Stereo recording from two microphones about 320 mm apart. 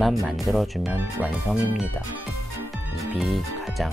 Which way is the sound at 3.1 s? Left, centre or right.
Centre.